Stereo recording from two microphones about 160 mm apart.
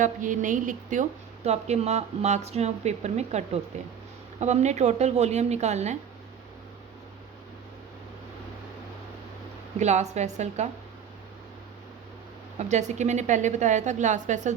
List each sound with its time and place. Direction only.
0.0 s a woman's voice: 55° right (ahead or behind)
9.7 s a woman's voice: 45° right (ahead or behind)
12.5 s a woman's voice: 45° right (ahead or behind)